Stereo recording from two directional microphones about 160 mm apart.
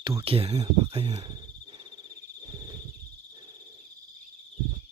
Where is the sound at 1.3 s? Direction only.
30° right (ahead or behind).